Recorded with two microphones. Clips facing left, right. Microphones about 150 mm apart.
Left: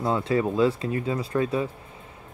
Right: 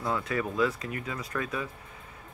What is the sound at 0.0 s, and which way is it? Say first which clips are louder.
Speech: left 7 dB; 30° left (ahead or behind).